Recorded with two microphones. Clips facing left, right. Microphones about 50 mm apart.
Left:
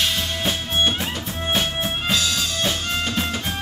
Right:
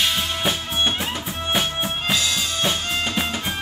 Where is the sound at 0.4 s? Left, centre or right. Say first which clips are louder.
Left 1 dB; centre.